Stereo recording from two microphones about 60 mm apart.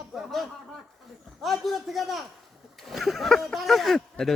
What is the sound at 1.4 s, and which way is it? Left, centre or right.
Speech, centre.